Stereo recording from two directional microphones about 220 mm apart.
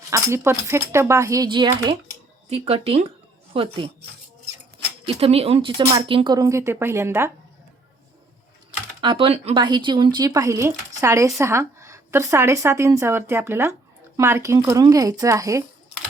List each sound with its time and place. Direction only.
0.1 s a woman's voice: 10° right (ahead or behind)
5.0 s a woman's voice: 25° right (ahead or behind); by 7.3 s 10° right (ahead or behind)
9.0 s a woman's voice: 20° right (ahead or behind)